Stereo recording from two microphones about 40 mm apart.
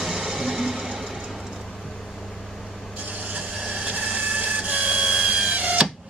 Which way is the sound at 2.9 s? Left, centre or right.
Right.